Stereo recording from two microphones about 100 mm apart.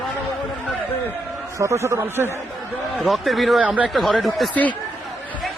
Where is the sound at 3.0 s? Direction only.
Centre (ahead or behind).